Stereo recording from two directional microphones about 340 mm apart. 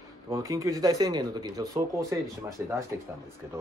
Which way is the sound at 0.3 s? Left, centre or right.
Centre.